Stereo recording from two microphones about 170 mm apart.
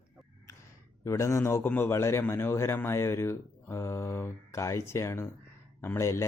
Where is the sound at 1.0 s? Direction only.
15° left (ahead or behind).